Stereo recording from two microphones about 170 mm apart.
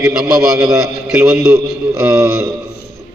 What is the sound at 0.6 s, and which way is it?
A man's voice, 20° right (ahead or behind).